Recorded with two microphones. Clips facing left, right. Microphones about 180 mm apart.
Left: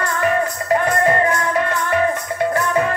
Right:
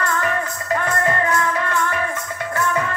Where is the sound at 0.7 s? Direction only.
25° left (ahead or behind).